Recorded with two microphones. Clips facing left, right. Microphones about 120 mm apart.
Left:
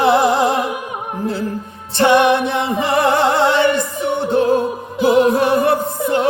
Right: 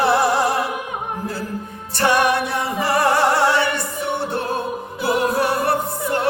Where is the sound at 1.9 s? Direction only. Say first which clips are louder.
Left 5 dB; 20° left (ahead or behind).